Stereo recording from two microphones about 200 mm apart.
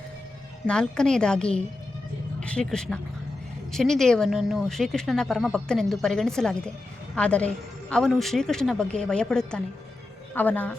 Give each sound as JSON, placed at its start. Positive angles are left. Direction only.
{"t": 0.7, "sound": "a woman's voice", "side_deg": 5}